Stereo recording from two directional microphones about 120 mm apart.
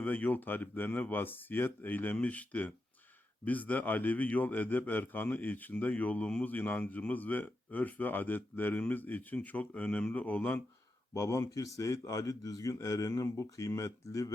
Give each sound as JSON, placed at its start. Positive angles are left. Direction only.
{"t": 0.0, "sound": "speech", "side_deg": 15}
{"t": 11.1, "sound": "speech", "side_deg": 25}